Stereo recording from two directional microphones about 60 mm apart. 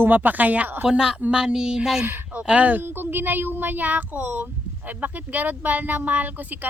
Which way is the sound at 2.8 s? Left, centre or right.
Right.